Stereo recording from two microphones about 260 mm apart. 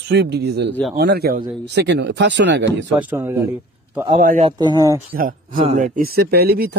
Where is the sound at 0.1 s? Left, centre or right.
Right.